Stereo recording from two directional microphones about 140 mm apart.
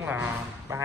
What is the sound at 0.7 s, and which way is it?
Speech, 20° right (ahead or behind).